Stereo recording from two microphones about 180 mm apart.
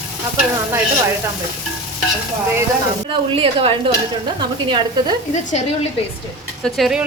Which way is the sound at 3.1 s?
30° right (ahead or behind).